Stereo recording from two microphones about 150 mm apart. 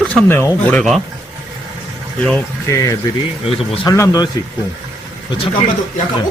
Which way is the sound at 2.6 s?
20° left (ahead or behind).